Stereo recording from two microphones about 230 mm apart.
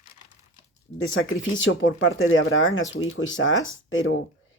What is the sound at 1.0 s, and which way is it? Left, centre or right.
Speech, left.